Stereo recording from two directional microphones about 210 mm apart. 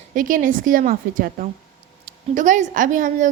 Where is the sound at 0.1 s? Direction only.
40° right (ahead or behind).